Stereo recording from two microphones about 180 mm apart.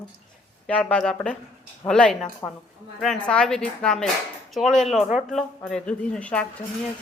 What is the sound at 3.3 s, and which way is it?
Speech, 5° left (ahead or behind).